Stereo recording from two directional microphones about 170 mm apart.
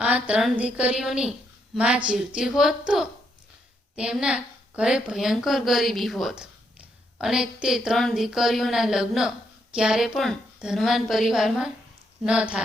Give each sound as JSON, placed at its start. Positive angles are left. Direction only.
{"t": 0.0, "sound": "a woman's voice", "side_deg": -5}